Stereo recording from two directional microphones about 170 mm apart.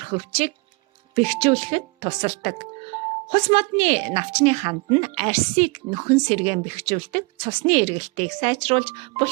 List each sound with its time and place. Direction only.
0.0 s a woman's voice: 35° right (ahead or behind)